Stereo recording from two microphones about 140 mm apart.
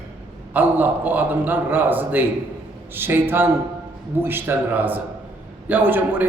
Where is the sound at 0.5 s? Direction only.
10° right (ahead or behind).